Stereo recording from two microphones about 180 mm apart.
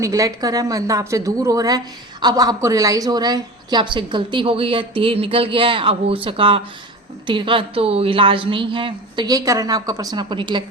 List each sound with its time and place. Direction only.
0.0 s a woman's voice: 20° right (ahead or behind)